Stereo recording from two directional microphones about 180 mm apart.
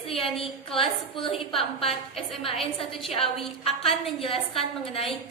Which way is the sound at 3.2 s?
Centre (ahead or behind).